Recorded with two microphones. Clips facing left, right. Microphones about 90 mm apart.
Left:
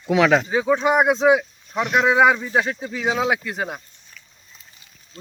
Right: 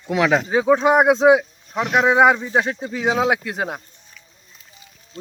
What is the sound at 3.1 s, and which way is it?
Speech, 40° right (ahead or behind).